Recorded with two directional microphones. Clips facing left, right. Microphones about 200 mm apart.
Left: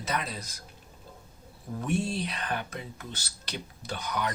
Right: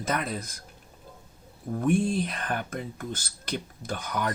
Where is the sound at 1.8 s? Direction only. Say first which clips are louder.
Right 5 dB; 50° right (ahead or behind).